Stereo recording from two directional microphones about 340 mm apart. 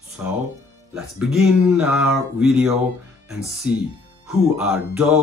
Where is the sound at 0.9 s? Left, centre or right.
Centre.